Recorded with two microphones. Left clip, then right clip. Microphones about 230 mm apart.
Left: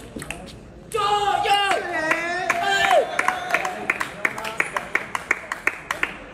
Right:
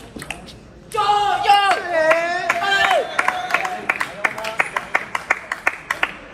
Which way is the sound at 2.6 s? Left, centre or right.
Right.